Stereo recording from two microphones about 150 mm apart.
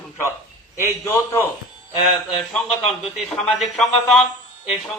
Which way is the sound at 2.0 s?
Centre (ahead or behind).